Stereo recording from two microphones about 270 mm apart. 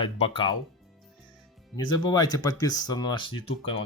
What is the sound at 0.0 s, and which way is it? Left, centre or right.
Speech, centre.